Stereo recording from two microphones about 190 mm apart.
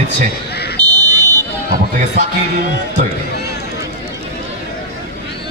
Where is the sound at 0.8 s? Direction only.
20° right (ahead or behind).